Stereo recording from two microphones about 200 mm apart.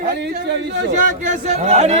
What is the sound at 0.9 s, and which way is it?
Speech, 40° right (ahead or behind).